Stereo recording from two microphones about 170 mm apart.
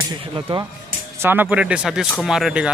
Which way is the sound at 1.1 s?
10° right (ahead or behind).